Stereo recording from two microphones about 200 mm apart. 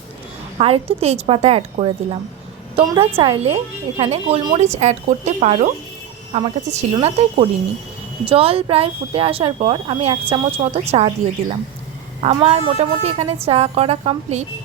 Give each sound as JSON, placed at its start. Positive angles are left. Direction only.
{"t": 0.6, "sound": "speech", "side_deg": -30}
{"t": 12.2, "sound": "speech", "side_deg": -30}